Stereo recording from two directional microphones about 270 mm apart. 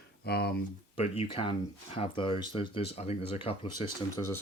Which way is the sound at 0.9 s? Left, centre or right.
Left.